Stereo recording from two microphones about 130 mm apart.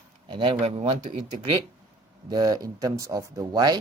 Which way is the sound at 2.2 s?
30° right (ahead or behind).